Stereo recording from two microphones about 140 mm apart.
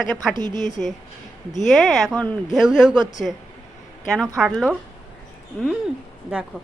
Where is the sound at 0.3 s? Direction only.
30° right (ahead or behind).